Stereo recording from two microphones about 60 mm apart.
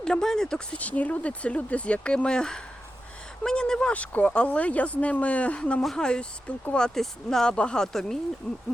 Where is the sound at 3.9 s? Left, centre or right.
Left.